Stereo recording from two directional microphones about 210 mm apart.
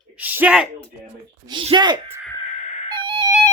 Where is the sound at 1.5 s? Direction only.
20° right (ahead or behind).